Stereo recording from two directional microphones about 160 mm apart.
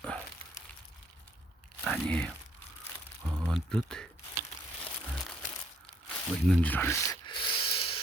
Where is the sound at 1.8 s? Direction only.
5° left (ahead or behind).